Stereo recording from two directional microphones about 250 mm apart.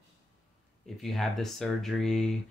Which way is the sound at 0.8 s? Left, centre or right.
Centre.